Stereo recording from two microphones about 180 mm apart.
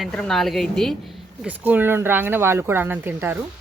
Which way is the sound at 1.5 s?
10° right (ahead or behind).